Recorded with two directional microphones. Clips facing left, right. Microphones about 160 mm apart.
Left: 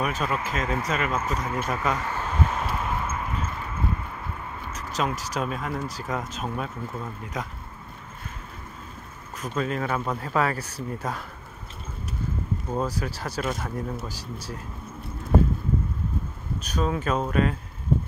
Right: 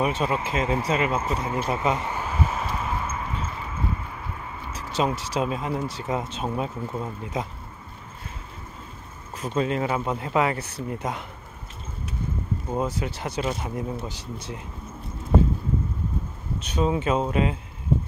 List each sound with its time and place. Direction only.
0.0 s speech: 25° right (ahead or behind); by 3.3 s centre (ahead or behind)
4.9 s speech: 30° right (ahead or behind)
9.4 s speech: 25° right (ahead or behind)
12.7 s speech: 20° right (ahead or behind)
16.6 s speech: 25° right (ahead or behind)